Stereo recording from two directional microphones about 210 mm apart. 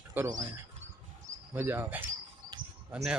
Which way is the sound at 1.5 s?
10° right (ahead or behind).